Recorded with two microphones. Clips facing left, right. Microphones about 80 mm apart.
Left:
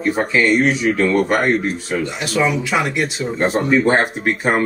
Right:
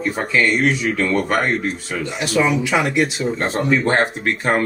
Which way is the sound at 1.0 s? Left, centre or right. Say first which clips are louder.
Left 3 dB; centre.